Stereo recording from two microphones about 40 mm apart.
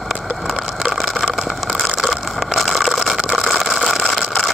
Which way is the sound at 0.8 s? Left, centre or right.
Centre.